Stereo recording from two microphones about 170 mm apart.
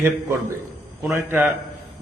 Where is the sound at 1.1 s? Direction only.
15° right (ahead or behind).